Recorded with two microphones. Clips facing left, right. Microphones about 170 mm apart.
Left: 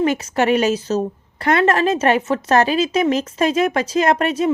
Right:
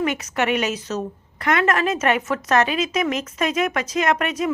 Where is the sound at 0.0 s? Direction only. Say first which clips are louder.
Left 5 dB; 30° left (ahead or behind).